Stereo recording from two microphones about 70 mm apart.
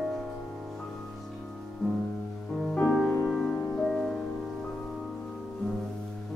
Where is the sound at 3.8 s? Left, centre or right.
Centre.